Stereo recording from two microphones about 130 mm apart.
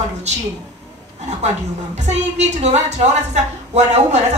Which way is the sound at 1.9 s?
60° right (ahead or behind).